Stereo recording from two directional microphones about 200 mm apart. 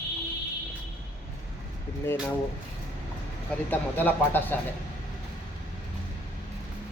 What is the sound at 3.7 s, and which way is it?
Speech, 10° left (ahead or behind).